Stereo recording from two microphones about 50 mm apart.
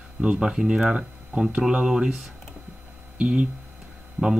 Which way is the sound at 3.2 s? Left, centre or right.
Right.